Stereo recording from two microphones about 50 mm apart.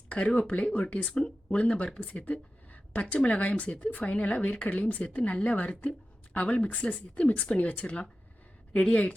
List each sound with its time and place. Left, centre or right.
0.1 s speech: left